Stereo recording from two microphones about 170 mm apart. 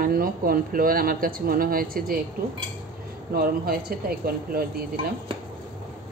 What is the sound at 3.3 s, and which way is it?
Speech, 60° right (ahead or behind).